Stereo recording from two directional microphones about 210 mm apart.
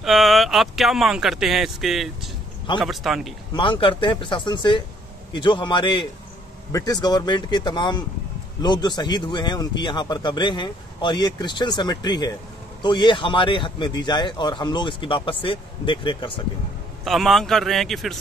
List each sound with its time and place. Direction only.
0.0 s speech: centre (ahead or behind)
3.5 s a man's voice: 25° left (ahead or behind)
17.0 s speech: centre (ahead or behind)